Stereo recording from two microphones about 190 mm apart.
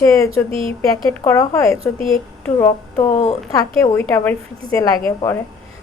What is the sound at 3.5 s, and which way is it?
A woman's voice, 15° left (ahead or behind).